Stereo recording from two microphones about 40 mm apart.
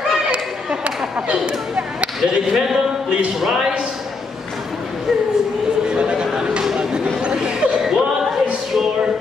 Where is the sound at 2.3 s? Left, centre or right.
Centre.